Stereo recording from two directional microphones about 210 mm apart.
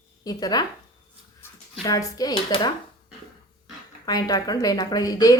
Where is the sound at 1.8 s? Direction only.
15° left (ahead or behind).